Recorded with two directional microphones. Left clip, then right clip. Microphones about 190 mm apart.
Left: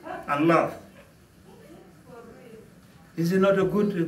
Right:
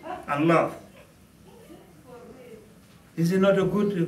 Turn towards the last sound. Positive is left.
turn(degrees=0)  # may be behind; listen again after turning